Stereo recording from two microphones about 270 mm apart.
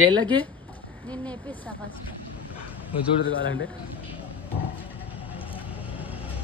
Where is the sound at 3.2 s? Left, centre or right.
Left.